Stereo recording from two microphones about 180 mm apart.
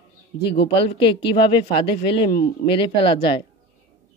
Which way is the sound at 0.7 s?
30° left (ahead or behind).